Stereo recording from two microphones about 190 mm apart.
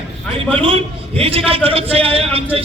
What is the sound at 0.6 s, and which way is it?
A man's voice, 30° right (ahead or behind).